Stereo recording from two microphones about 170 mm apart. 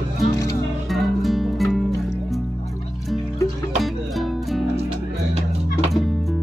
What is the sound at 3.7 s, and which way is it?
Music, centre (ahead or behind).